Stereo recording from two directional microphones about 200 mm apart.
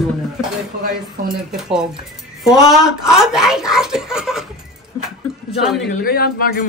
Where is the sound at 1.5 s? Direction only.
5° right (ahead or behind).